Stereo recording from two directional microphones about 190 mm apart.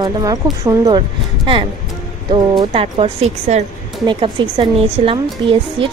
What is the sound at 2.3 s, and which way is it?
A woman's voice, 25° right (ahead or behind).